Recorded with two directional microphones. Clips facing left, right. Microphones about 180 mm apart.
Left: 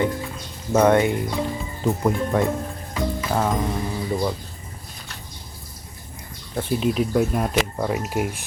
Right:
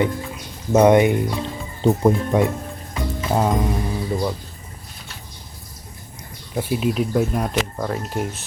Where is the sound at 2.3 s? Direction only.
15° right (ahead or behind).